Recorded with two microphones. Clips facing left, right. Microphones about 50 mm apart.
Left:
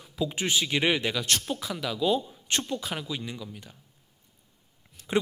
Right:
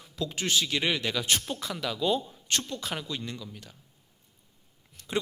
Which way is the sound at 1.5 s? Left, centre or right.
Centre.